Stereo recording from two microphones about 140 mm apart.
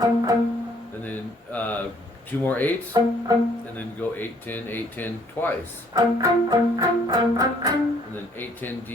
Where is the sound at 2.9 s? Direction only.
25° right (ahead or behind).